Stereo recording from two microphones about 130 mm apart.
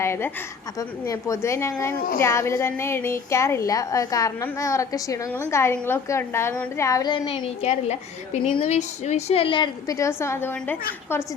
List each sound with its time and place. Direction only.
0.0 s a woman's voice: 20° left (ahead or behind); by 7.5 s 35° left (ahead or behind)
7.6 s speech: 60° left (ahead or behind); by 9.6 s 45° left (ahead or behind)
9.8 s a woman's voice: 25° left (ahead or behind)